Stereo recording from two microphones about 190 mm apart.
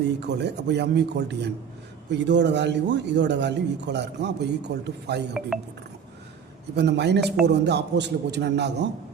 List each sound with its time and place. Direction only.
0.2 s a man's voice: 65° right (ahead or behind)
6.7 s a man's voice: 60° right (ahead or behind)